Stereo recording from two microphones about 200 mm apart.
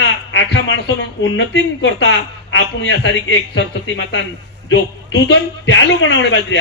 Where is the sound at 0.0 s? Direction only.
60° left (ahead or behind).